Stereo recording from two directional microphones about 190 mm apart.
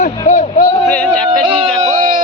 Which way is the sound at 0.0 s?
40° left (ahead or behind).